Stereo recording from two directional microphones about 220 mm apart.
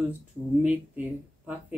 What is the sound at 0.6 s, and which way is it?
Speech, 5° right (ahead or behind).